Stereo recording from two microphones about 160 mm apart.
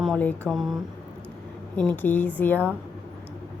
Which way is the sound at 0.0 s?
5° left (ahead or behind).